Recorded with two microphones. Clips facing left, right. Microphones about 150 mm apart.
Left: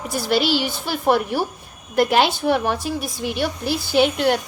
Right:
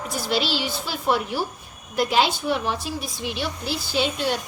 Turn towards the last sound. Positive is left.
turn(degrees=60)  # may be behind; listen again after turning